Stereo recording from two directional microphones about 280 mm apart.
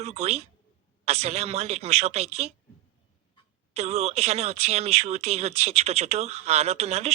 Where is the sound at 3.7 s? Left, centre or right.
Right.